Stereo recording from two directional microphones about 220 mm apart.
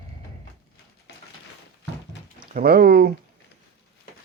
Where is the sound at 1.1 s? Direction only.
55° left (ahead or behind).